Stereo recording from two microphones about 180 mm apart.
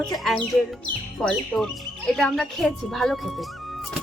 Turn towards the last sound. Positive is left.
turn(degrees=0)  # may be behind; listen again after turning